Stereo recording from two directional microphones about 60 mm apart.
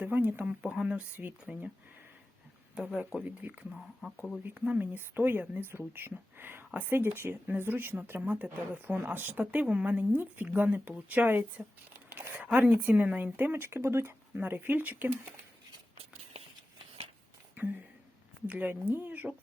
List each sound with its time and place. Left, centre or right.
0.0 s a sound: right
0.4 s speech: centre
2.7 s speech: right
4.8 s speech: right
14.3 s speech: right
17.5 s a sound: right
18.4 s speech: right